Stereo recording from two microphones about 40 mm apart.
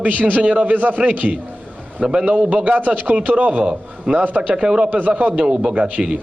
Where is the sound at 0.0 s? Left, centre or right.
Right.